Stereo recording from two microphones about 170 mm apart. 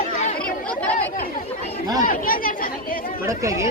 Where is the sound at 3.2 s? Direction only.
20° right (ahead or behind).